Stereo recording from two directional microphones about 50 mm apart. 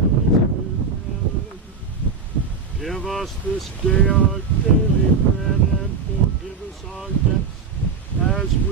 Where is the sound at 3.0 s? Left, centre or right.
Centre.